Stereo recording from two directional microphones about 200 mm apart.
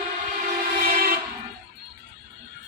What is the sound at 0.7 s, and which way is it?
Train, 45° right (ahead or behind).